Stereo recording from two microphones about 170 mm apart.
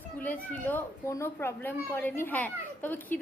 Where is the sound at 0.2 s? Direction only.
10° left (ahead or behind).